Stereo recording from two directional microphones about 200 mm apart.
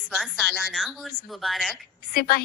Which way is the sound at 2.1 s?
50° left (ahead or behind).